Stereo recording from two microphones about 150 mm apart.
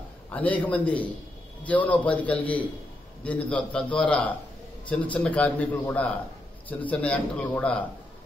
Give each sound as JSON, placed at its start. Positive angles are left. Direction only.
{"t": 0.3, "sound": "a man's voice", "side_deg": 10}